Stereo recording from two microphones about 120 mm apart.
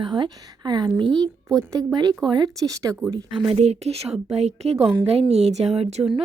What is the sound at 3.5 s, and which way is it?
A woman's voice, 65° right (ahead or behind).